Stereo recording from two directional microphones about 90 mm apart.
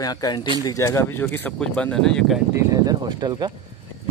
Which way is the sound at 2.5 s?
40° right (ahead or behind).